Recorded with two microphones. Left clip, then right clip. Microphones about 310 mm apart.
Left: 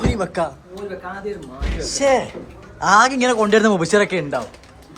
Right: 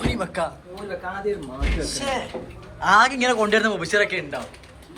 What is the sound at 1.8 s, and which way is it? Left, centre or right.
A man's voice, left.